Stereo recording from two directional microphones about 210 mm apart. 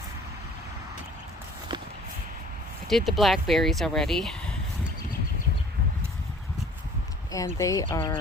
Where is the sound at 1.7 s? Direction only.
20° right (ahead or behind).